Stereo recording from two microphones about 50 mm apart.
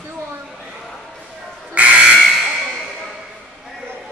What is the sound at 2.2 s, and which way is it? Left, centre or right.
Fire alarm, centre.